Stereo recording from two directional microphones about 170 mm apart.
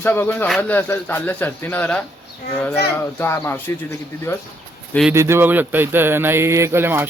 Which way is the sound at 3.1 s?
15° left (ahead or behind).